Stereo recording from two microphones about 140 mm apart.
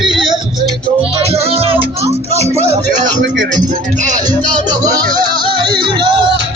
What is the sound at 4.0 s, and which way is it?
Speech, 60° right (ahead or behind).